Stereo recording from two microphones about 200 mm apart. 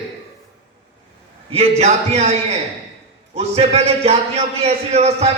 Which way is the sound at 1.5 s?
30° right (ahead or behind).